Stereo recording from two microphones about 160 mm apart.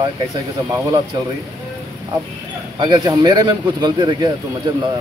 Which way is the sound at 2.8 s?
25° right (ahead or behind).